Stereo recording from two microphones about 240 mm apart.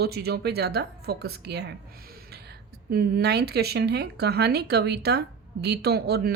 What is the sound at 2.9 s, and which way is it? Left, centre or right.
Speech, right.